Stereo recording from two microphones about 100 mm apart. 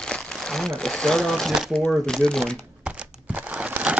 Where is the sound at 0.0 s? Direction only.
5° left (ahead or behind).